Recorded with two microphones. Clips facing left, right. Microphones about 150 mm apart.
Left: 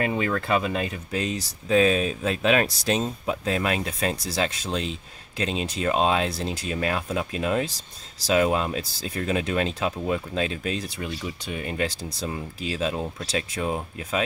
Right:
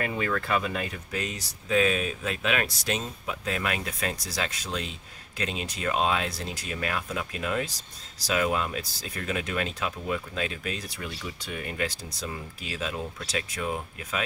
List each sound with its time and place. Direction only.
0.0 s speech: 20° left (ahead or behind)